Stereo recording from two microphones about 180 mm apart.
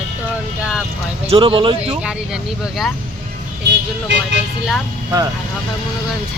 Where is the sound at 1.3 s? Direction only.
30° right (ahead or behind).